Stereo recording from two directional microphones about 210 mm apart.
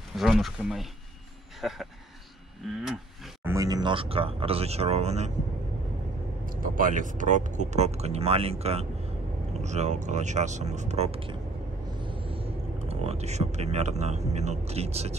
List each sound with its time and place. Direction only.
0.1 s speech: centre (ahead or behind)
3.4 s speech: 15° right (ahead or behind)
6.4 s speech: 40° right (ahead or behind)